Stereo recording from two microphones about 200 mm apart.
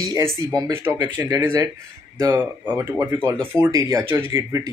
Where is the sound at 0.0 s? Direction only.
15° right (ahead or behind).